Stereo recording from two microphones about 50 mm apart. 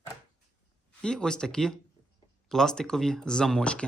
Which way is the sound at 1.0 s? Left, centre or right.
Centre.